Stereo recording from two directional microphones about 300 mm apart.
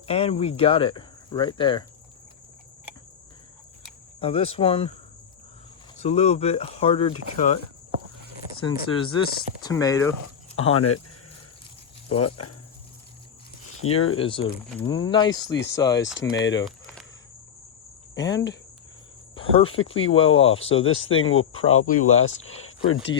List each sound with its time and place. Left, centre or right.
0.1 s speech: centre
4.2 s speech: centre
6.0 s speech: left
12.2 s speech: left
13.8 s speech: left
14.2 s speech: centre
16.1 s speech: left
16.6 s a sound: centre
18.1 s cricket: centre
19.6 s speech: left